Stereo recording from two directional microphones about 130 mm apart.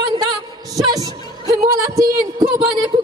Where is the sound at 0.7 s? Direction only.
30° right (ahead or behind).